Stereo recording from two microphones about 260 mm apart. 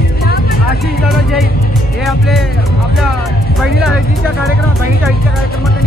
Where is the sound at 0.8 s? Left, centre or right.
Centre.